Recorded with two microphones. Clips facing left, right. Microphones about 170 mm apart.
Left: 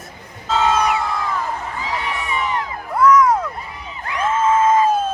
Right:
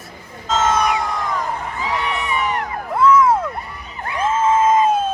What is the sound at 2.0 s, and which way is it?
Crowd, 65° right (ahead or behind).